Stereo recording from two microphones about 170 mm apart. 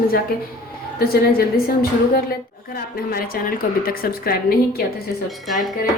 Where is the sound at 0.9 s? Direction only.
60° left (ahead or behind).